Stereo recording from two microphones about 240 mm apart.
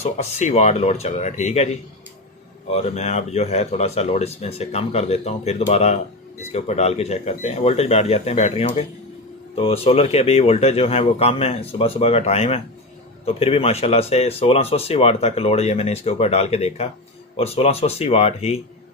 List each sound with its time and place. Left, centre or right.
0.0 s speech: left